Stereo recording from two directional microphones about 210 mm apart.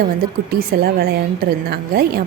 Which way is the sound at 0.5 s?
45° right (ahead or behind).